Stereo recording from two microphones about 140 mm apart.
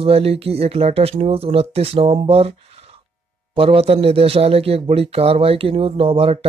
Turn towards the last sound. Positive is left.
turn(degrees=-40)  # may be behind; listen again after turning